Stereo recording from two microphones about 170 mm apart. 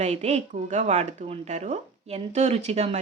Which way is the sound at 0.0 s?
40° right (ahead or behind).